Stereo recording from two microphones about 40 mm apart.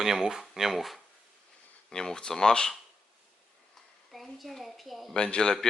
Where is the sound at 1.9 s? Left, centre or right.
Centre.